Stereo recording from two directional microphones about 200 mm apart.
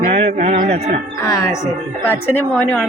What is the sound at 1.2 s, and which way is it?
Speech, 15° left (ahead or behind).